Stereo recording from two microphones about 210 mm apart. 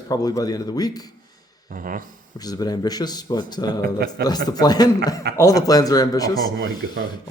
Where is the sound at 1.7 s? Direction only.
40° right (ahead or behind).